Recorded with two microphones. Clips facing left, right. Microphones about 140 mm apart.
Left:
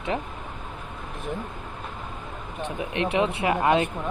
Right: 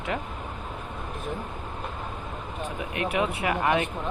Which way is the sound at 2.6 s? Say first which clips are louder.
Left 3 dB; 25° left (ahead or behind).